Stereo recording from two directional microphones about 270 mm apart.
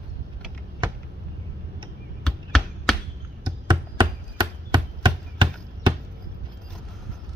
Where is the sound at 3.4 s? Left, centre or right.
Centre.